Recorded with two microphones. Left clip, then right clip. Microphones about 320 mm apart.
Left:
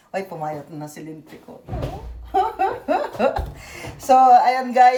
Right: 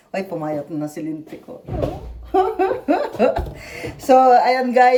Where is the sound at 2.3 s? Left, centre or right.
Centre.